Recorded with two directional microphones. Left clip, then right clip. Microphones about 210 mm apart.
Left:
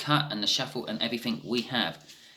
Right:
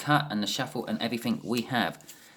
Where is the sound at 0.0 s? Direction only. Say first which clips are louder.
Even; 50° right (ahead or behind).